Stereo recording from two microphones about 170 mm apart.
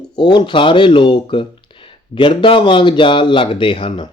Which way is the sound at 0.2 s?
25° left (ahead or behind).